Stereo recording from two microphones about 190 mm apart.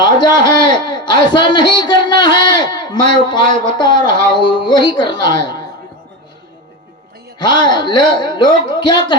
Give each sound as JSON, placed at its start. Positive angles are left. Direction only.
{"t": 0.0, "sound": "a man's voice", "side_deg": 20}
{"t": 7.3, "sound": "a man's voice", "side_deg": 25}